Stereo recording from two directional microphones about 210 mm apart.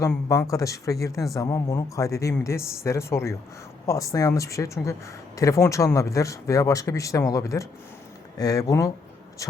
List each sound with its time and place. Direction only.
0.3 s speech: 15° left (ahead or behind)